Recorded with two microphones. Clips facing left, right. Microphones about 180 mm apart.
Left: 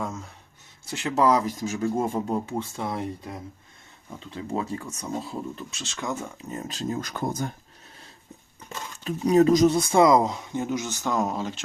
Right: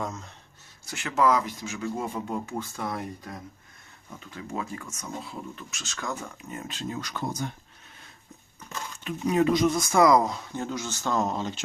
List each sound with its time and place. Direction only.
0.0 s speech: 10° left (ahead or behind)
0.9 s speech: 30° left (ahead or behind)
6.5 s speech: 40° left (ahead or behind)
9.0 s speech: 35° left (ahead or behind); by 11.6 s 5° left (ahead or behind)